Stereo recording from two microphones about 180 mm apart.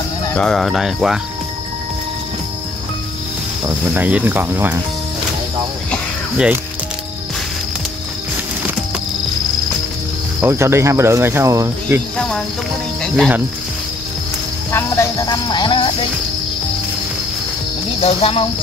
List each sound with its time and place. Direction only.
0.3 s speech: 5° left (ahead or behind)
3.6 s speech: 10° right (ahead or behind)
6.3 s speech: 5° right (ahead or behind)
10.4 s speech: 15° right (ahead or behind)
12.2 s speech: 5° left (ahead or behind)
14.7 s music: 15° left (ahead or behind)
18.0 s speech: 30° left (ahead or behind)